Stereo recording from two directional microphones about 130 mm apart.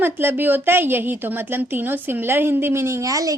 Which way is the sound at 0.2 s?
15° right (ahead or behind).